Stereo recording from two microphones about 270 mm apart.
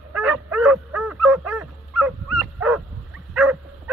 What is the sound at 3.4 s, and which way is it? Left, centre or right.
Dog, centre.